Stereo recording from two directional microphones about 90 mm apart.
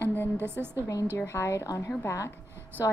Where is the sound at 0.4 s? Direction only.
25° right (ahead or behind).